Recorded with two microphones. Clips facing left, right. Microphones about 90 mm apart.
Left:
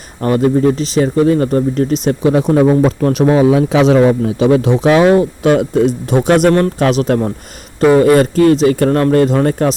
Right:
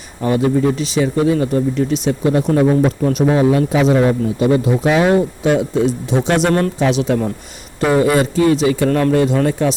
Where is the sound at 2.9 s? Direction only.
80° left; by 5.8 s 65° left (ahead or behind).